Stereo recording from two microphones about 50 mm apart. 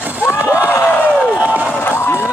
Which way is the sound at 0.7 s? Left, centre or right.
Left.